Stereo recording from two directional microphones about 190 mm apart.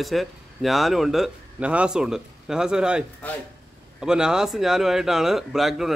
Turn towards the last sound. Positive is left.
turn(degrees=0)  # may be behind; listen again after turning